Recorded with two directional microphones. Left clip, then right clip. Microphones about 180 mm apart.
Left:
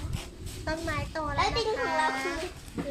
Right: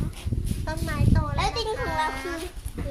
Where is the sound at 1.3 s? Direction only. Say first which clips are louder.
Left 1 dB; 50° right (ahead or behind).